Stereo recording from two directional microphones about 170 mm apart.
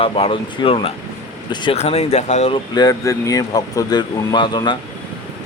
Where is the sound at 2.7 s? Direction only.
20° left (ahead or behind).